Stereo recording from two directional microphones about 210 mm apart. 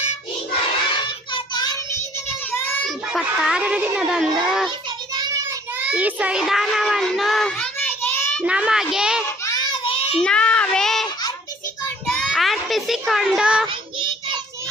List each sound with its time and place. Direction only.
1.0 s child singing: 20° left (ahead or behind)
3.1 s speech: centre (ahead or behind)
5.1 s child singing: 15° right (ahead or behind); by 8.4 s 10° left (ahead or behind)
8.4 s speech: 5° right (ahead or behind)
9.4 s child singing: 20° left (ahead or behind)
10.2 s speech: 5° left (ahead or behind)
12.0 s child singing: centre (ahead or behind)
13.7 s child singing: 20° right (ahead or behind)